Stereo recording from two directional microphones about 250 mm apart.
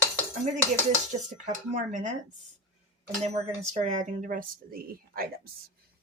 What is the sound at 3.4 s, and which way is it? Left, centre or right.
Speech, right.